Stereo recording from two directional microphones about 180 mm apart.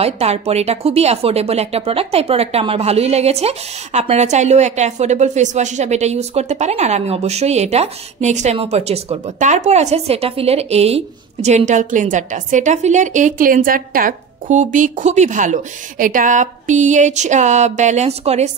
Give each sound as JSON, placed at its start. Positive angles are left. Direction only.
{"t": 0.0, "sound": "speech", "side_deg": -35}